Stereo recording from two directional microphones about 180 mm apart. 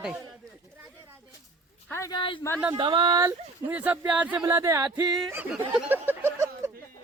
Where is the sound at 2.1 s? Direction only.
30° left (ahead or behind).